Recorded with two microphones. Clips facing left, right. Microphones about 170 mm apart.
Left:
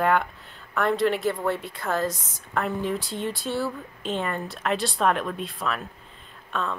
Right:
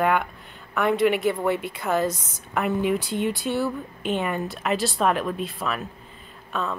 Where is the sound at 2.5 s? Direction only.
15° right (ahead or behind).